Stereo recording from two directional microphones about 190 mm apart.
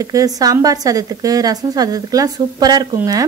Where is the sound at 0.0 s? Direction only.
20° right (ahead or behind).